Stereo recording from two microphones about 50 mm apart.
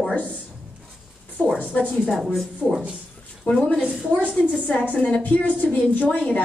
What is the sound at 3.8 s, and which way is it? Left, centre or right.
Speech, right.